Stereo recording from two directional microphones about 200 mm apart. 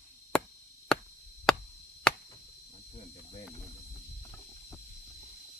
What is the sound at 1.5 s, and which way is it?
Chop, 5° left (ahead or behind).